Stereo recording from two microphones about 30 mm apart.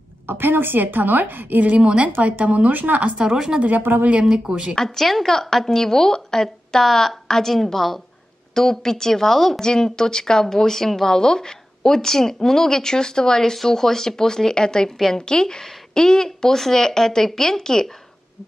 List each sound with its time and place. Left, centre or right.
0.5 s a woman's voice: right
1.7 s a woman's voice: right
2.2 s speech: right
2.7 s speech: right
3.3 s speech: centre
3.6 s speech: right
4.3 s speech: right
4.7 s a woman's voice: centre
8.5 s a woman's voice: centre
9.6 s a woman's voice: left